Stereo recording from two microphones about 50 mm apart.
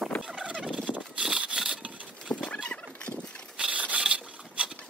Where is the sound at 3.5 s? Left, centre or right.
Right.